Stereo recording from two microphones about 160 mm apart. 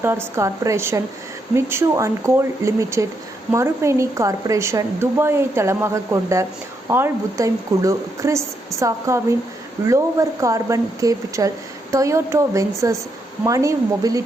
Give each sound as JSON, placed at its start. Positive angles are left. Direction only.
{"t": 0.0, "sound": "a woman's voice", "side_deg": -15}